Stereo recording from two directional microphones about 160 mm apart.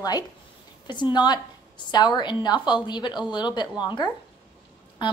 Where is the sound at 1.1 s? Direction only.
25° left (ahead or behind).